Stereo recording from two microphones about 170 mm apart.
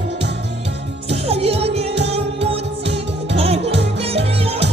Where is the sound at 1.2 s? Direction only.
35° right (ahead or behind).